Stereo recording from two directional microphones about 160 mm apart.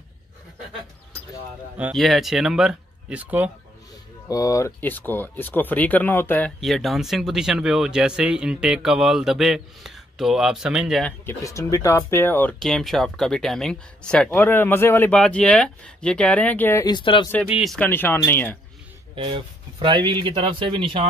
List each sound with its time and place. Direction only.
2.0 s speech: centre (ahead or behind)
4.3 s speech: 20° left (ahead or behind)
6.6 s speech: centre (ahead or behind)
11.2 s speech: 20° left (ahead or behind)
16.8 s speech: 30° left (ahead or behind)
17.5 s speech: 5° right (ahead or behind)
17.7 s speech: 10° left (ahead or behind)
19.1 s speech: 30° right (ahead or behind)